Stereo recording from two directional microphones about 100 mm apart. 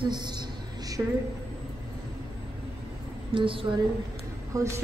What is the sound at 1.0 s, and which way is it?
Speech, 25° right (ahead or behind).